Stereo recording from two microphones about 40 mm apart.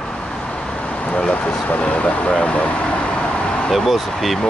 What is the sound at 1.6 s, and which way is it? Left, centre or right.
Speech, left.